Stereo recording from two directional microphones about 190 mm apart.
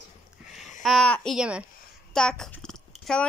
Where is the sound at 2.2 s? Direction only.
5° left (ahead or behind).